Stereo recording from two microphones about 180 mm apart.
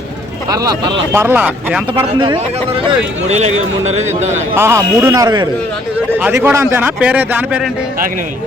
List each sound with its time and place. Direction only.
0.5 s a man's voice: 20° right (ahead or behind)
2.1 s speech: 25° right (ahead or behind)
3.2 s a man's voice: 40° right (ahead or behind)
4.5 s a man's voice: 15° right (ahead or behind)
6.1 s a man's voice: 10° right (ahead or behind)